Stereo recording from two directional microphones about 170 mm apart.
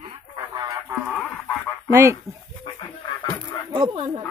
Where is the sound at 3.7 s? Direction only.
30° right (ahead or behind).